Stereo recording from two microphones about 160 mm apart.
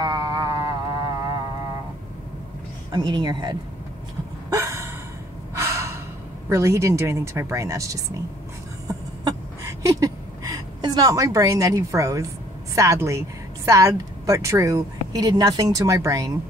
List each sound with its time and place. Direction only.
0.0 s a sound: 25° right (ahead or behind)
2.9 s speech: 25° right (ahead or behind)
4.5 s gasp: 20° right (ahead or behind)
6.5 s speech: 20° right (ahead or behind)
8.8 s a sound: 20° right (ahead or behind)
12.7 s speech: 20° right (ahead or behind)